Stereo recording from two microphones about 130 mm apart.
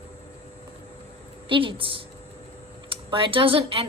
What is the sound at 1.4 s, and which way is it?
A woman's voice, 40° right (ahead or behind).